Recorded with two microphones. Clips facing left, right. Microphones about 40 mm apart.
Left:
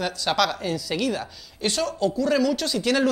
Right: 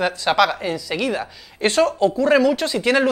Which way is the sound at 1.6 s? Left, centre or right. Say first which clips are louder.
Right 8 dB; right.